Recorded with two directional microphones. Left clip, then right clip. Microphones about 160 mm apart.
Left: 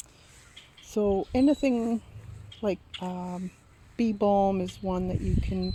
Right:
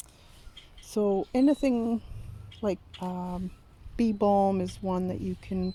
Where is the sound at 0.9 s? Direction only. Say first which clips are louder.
Left 1 dB; centre (ahead or behind).